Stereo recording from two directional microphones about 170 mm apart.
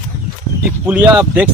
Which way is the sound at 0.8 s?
10° right (ahead or behind).